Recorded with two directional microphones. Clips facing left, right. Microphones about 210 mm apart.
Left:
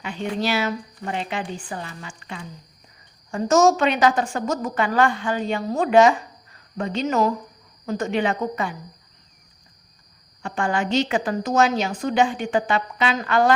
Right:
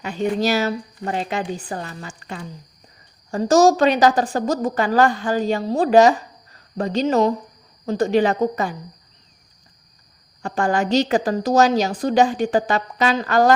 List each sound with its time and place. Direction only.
0.0 s a woman's voice: 40° right (ahead or behind)
10.4 s a woman's voice: 40° right (ahead or behind)